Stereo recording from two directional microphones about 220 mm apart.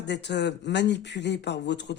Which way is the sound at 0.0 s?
50° left (ahead or behind).